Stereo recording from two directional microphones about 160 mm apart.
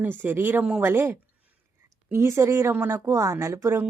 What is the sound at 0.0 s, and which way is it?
A woman's voice, 10° right (ahead or behind).